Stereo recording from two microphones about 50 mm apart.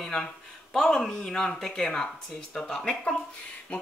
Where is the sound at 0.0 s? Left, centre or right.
Centre.